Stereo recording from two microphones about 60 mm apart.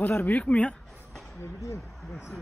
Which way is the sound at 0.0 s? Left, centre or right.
Left.